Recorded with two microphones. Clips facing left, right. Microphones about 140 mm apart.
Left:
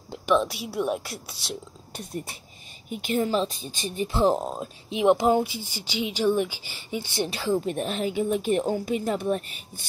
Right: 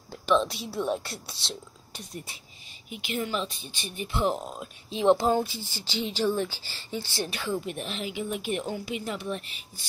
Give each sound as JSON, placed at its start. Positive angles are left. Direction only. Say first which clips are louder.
{"t": 0.1, "sound": "speech", "louder": "left 2 dB", "side_deg": 10}
{"t": 2.9, "sound": "speech", "louder": "left 6 dB", "side_deg": 45}
{"t": 4.8, "sound": "speech", "louder": "left 2 dB", "side_deg": 20}
{"t": 7.2, "sound": "speech", "louder": "left 6 dB", "side_deg": 30}
{"t": 7.7, "sound": "a woman's voice", "louder": "left 7 dB", "side_deg": 45}